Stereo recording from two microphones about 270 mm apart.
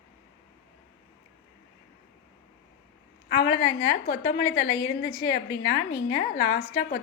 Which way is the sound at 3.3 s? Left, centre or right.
Left.